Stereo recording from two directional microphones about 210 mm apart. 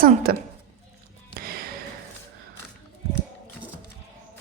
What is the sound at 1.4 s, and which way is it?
Music, 45° right (ahead or behind).